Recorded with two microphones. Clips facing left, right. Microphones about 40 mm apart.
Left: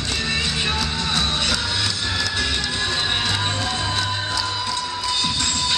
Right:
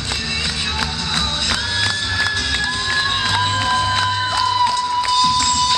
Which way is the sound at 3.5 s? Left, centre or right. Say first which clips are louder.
Right 6 dB; right.